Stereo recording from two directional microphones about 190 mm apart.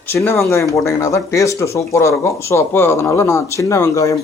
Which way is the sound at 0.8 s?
15° left (ahead or behind).